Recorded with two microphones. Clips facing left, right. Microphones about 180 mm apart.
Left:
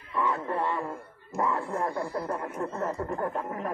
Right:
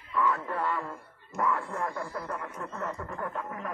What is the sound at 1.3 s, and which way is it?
Speech, 25° left (ahead or behind).